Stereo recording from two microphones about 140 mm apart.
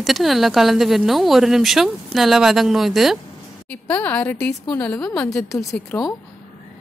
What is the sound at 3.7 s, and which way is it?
A woman's voice, 10° left (ahead or behind).